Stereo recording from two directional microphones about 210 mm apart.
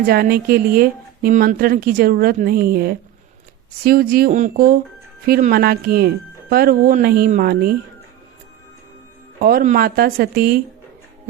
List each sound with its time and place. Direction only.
0.0 s speech: 45° right (ahead or behind)
9.4 s speech: 45° right (ahead or behind)